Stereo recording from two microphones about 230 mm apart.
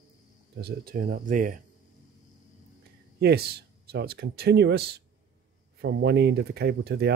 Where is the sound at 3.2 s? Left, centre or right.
Right.